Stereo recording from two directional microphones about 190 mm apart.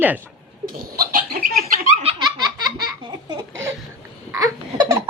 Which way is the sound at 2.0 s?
25° right (ahead or behind).